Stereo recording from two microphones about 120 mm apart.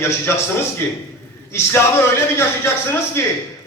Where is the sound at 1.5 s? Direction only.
20° left (ahead or behind).